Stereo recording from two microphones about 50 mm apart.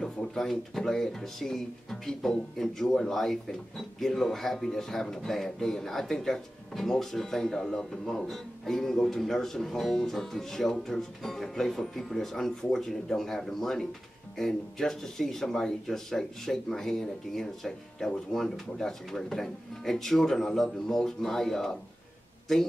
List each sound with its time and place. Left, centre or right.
0.0 s speech: centre